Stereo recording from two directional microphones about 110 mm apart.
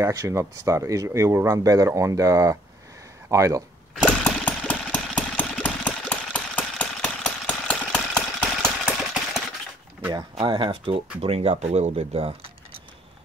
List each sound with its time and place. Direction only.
0.0 s speech: 30° right (ahead or behind)
4.0 s engine: 10° left (ahead or behind)
10.3 s speech: 45° right (ahead or behind)
11.1 s speech: 65° right (ahead or behind)